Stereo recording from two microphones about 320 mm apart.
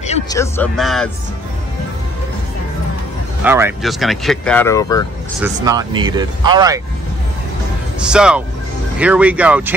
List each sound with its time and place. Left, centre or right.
0.0 s music: left
0.4 s speech: centre
3.4 s speech: centre
5.4 s speech: centre
8.1 s speech: centre